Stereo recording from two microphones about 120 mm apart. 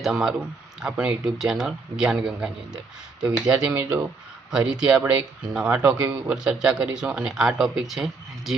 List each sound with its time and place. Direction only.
0.0 s speech: 5° right (ahead or behind)